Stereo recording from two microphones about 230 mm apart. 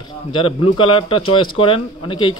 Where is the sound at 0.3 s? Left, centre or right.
Left.